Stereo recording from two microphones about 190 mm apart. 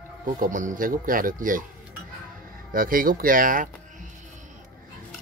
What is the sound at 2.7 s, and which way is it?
Speech, 50° right (ahead or behind).